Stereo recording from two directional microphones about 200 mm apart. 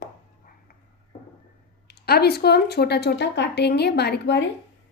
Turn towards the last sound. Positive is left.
turn(degrees=60)  # may be behind; listen again after turning